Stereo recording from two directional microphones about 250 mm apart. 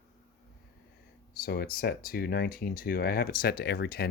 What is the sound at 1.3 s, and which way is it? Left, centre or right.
Speech, left.